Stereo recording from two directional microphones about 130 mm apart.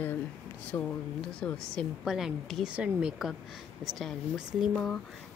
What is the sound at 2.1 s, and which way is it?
A woman's voice, 5° right (ahead or behind).